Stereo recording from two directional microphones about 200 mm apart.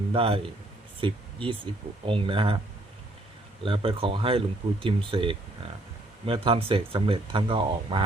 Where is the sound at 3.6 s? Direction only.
25° right (ahead or behind).